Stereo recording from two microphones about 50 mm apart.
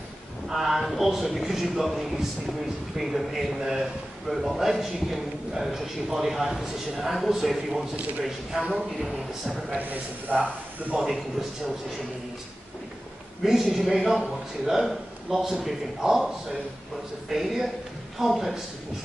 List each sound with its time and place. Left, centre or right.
0.5 s a man's voice: centre
7.9 s speech: right
8.2 s a man's voice: centre
10.3 s speech: right
11.1 s a man's voice: centre
13.4 s a man's voice: centre
17.3 s a man's voice: centre